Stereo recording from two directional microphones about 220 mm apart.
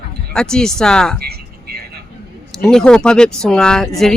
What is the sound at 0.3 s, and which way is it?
Speech, 5° left (ahead or behind).